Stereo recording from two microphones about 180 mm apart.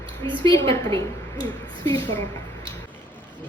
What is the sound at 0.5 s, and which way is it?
Speech, 25° right (ahead or behind).